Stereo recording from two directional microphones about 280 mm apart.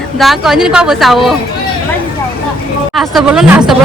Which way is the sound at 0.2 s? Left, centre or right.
Centre.